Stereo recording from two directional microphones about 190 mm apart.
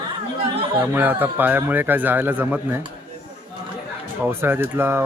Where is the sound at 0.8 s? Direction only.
10° right (ahead or behind).